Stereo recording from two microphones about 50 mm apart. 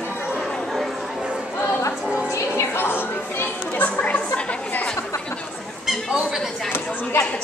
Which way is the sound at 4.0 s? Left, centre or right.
Left.